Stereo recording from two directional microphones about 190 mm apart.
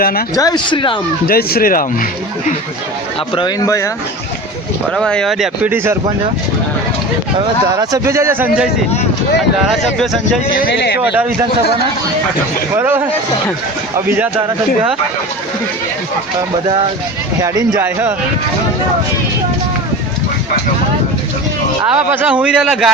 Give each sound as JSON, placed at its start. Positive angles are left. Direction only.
{"t": 0.0, "sound": "speech", "side_deg": 50}
{"t": 0.3, "sound": "speech", "side_deg": 20}
{"t": 1.3, "sound": "speech", "side_deg": 55}
{"t": 3.3, "sound": "speech", "side_deg": 20}
{"t": 4.9, "sound": "speech", "side_deg": 5}
{"t": 7.3, "sound": "speech", "side_deg": -20}
{"t": 9.7, "sound": "speech", "side_deg": 0}
{"t": 10.5, "sound": "speech", "side_deg": 55}
{"t": 11.0, "sound": "speech", "side_deg": -5}
{"t": 12.7, "sound": "speech", "side_deg": -10}
{"t": 17.4, "sound": "speech", "side_deg": -20}
{"t": 21.9, "sound": "speech", "side_deg": -10}